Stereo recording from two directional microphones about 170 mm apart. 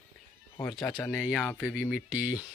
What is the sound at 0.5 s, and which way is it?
Speech, 20° left (ahead or behind).